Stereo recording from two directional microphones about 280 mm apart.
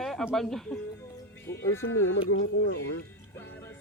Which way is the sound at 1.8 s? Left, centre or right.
Left.